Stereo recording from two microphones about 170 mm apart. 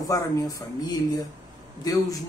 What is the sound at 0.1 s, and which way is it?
A man's voice, 20° left (ahead or behind).